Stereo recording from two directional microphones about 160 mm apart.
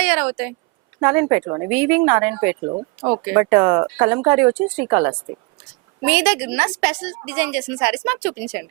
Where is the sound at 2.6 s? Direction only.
30° right (ahead or behind).